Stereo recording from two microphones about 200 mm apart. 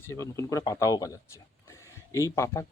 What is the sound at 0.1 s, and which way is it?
Speech, 15° left (ahead or behind).